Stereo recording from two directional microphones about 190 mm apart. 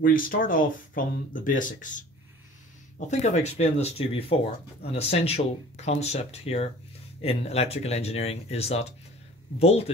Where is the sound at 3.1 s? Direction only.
35° left (ahead or behind).